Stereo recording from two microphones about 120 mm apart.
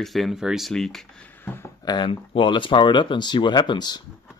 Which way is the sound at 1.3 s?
15° left (ahead or behind).